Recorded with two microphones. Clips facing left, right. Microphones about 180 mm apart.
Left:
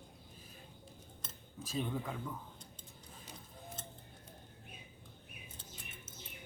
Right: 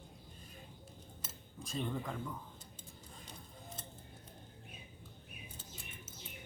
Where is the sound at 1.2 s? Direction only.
5° left (ahead or behind).